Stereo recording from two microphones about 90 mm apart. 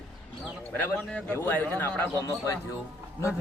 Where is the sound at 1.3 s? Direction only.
25° left (ahead or behind).